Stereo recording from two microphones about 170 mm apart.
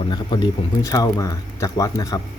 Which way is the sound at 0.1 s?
25° left (ahead or behind).